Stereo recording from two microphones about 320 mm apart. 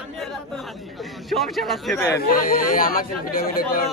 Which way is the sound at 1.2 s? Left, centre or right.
Centre.